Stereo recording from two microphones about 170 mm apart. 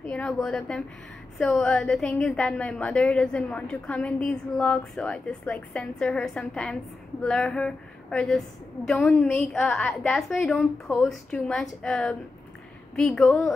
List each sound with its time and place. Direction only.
0.1 s a woman's voice: 5° left (ahead or behind)